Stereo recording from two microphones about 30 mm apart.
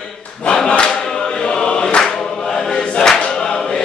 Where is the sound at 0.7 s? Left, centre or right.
Left.